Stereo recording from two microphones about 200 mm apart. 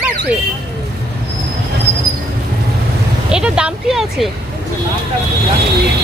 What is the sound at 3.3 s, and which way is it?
Speech, 5° right (ahead or behind).